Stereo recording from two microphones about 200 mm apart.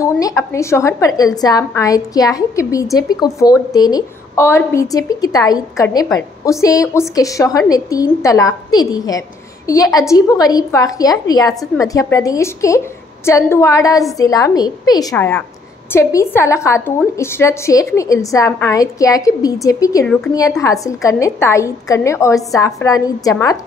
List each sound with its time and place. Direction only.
0.0 s a woman's voice: 15° left (ahead or behind)